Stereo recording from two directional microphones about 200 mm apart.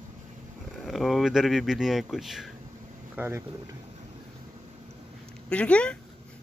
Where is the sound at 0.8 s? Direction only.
Centre (ahead or behind).